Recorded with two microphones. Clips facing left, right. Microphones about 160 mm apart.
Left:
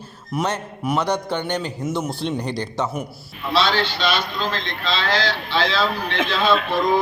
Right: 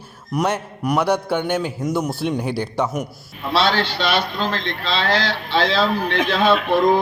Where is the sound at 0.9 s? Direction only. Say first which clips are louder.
Right 3 dB; 10° right (ahead or behind).